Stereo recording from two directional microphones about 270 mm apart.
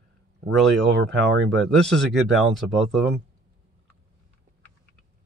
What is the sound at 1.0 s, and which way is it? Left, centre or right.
Speech, right.